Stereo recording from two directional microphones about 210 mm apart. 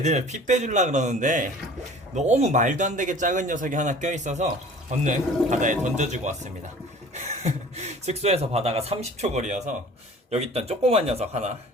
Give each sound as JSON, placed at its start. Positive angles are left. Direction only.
{"t": 0.0, "sound": "a man's voice", "side_deg": -35}